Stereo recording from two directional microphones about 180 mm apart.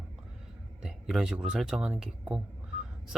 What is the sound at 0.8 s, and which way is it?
Speech, centre (ahead or behind).